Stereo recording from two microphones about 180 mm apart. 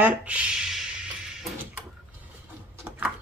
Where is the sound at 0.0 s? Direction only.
5° right (ahead or behind).